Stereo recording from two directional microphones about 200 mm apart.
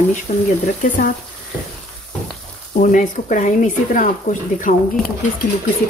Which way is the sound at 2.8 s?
40° left (ahead or behind).